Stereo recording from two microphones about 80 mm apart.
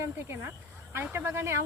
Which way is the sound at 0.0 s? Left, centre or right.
Right.